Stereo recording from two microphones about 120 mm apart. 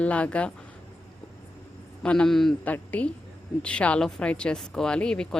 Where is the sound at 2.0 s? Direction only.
10° left (ahead or behind).